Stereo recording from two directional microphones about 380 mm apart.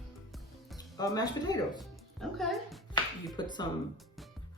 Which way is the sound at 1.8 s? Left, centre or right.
Centre.